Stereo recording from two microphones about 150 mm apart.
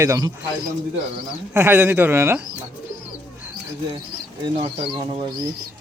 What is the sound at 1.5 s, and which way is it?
Speech, 15° right (ahead or behind).